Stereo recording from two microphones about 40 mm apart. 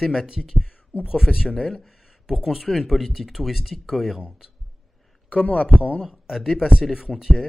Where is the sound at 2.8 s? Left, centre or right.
Centre.